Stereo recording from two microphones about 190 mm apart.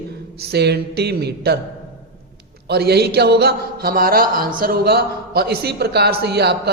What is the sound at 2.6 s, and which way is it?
Speech, 60° right (ahead or behind).